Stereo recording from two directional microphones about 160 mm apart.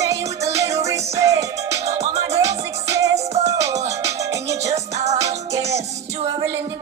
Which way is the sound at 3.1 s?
45° right (ahead or behind).